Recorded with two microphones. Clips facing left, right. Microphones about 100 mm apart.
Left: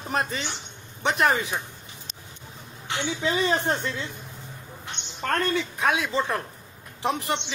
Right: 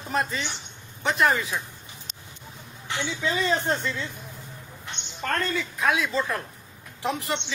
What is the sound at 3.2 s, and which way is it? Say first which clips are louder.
Speech: left 1 dB; 50° left (ahead or behind).